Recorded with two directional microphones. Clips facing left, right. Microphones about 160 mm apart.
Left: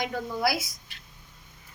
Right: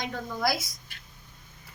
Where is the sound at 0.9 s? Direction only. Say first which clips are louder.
Right 1 dB; 50° right (ahead or behind).